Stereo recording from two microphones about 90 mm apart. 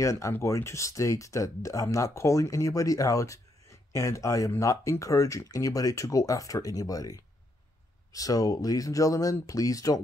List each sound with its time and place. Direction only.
0.0 s speech: 35° left (ahead or behind)